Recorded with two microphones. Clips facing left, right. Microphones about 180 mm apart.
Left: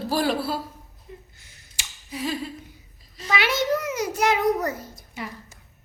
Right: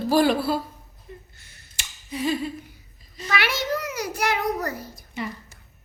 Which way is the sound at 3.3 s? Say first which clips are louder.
Left 3 dB; 20° left (ahead or behind).